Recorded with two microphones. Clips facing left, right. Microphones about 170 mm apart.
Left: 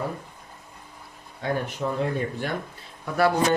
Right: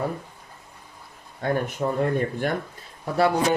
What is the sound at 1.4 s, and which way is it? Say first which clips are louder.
Speech: right 3 dB; 50° right (ahead or behind).